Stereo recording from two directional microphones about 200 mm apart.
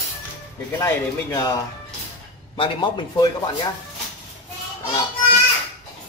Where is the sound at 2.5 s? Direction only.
25° left (ahead or behind).